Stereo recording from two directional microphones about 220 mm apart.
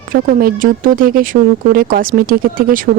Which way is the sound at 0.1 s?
40° right (ahead or behind).